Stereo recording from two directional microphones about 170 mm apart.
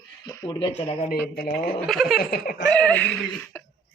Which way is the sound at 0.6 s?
35° left (ahead or behind).